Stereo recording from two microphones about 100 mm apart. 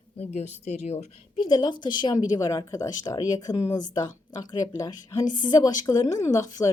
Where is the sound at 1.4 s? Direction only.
50° left (ahead or behind).